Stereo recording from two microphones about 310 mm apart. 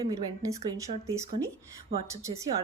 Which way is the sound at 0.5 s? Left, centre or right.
Centre.